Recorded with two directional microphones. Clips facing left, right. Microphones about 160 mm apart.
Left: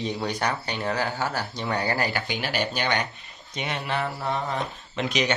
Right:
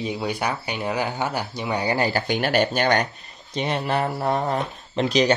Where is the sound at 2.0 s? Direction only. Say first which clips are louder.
Right 5 dB; 30° right (ahead or behind).